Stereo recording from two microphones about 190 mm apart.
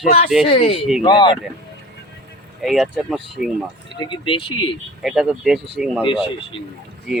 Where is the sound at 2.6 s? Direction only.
Centre (ahead or behind).